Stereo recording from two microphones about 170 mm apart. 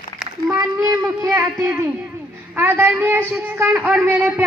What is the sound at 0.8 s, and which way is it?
Speech, 20° right (ahead or behind).